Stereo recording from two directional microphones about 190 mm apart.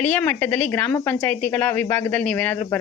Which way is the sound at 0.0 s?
5° left (ahead or behind).